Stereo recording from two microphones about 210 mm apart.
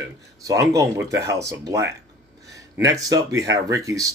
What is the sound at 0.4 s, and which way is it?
Speech, 15° right (ahead or behind).